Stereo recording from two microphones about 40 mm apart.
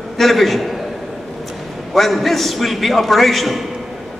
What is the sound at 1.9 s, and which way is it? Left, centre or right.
A man's voice, centre.